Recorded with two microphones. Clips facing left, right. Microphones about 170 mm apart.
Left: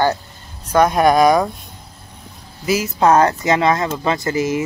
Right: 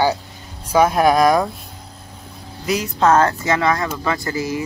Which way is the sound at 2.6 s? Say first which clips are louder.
Left 2 dB; 5° left (ahead or behind).